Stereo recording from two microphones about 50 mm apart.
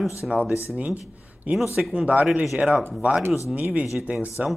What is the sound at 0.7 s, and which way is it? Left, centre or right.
Speech, right.